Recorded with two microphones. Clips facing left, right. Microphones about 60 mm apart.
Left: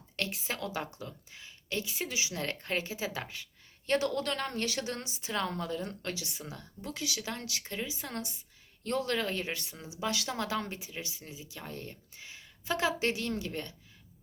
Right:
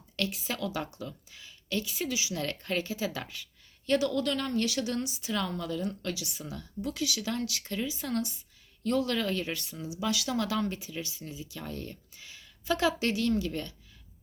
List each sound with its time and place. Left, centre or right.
0.2 s speech: left
3.2 s a sound: left
3.9 s speech: left
8.8 s speech: left